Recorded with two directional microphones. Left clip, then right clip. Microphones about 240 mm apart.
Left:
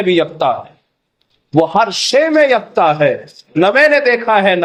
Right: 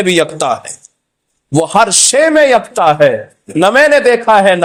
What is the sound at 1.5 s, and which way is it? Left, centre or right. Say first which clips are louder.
A man's voice: right 2 dB; right.